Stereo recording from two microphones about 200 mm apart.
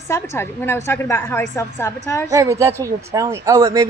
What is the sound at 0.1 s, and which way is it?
Speech, 10° left (ahead or behind).